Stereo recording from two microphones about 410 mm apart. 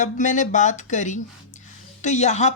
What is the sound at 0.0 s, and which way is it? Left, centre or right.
Speech, centre.